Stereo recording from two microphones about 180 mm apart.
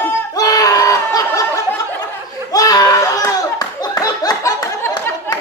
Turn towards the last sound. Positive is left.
turn(degrees=15)  # may be behind; listen again after turning